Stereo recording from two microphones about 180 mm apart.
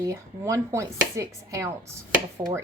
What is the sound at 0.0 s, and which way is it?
Speech, 20° right (ahead or behind).